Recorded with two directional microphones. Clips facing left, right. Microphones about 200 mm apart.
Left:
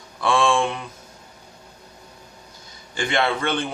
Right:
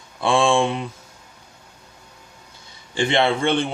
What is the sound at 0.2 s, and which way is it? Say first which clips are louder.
Speech: right 2 dB; 25° right (ahead or behind).